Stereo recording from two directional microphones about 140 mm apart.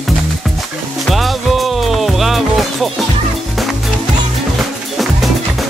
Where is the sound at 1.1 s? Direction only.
Centre (ahead or behind).